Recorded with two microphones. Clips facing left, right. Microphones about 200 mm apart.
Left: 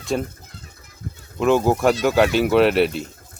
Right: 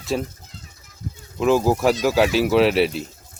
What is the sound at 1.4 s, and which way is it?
Speech, centre (ahead or behind).